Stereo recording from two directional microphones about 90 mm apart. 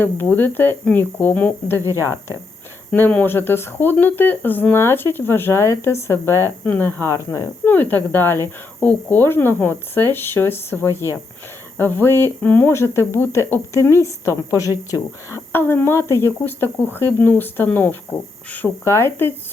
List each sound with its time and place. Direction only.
0.0 s speech: 20° left (ahead or behind)
1.8 s speech: 30° right (ahead or behind)
2.9 s a woman's voice: 20° left (ahead or behind)
7.6 s speech: 20° left (ahead or behind)
12.7 s a woman's voice: 30° left (ahead or behind)
15.5 s speech: 25° left (ahead or behind)
18.9 s speech: 30° left (ahead or behind)